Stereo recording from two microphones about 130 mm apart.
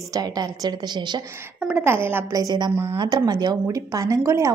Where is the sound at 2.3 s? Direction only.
30° right (ahead or behind).